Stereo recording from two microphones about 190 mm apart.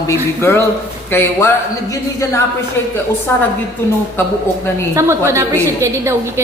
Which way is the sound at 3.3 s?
10° left (ahead or behind).